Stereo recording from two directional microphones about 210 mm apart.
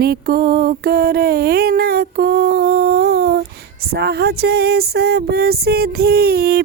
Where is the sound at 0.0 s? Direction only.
45° right (ahead or behind).